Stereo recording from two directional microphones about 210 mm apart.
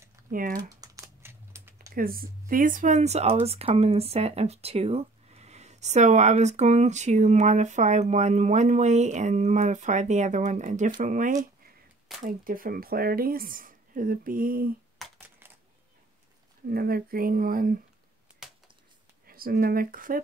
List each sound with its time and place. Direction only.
0.3 s speech: 40° right (ahead or behind)
0.6 s typing: 15° right (ahead or behind)
2.0 s speech: 45° right (ahead or behind)
15.1 s a sound: 10° right (ahead or behind)
16.6 s speech: 45° right (ahead or behind)
19.2 s speech: 45° right (ahead or behind)